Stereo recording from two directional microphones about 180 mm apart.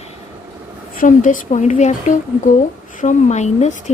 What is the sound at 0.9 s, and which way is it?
A woman's voice, 45° left (ahead or behind).